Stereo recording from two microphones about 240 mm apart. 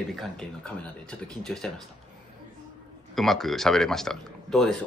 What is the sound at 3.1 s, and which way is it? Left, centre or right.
Speech, centre.